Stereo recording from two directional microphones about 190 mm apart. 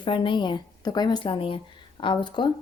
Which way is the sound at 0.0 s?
25° left (ahead or behind).